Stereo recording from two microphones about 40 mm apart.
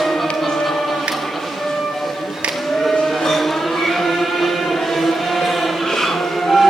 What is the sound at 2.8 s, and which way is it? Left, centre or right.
Music, centre.